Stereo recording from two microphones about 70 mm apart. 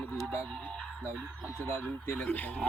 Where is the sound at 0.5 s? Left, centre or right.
Centre.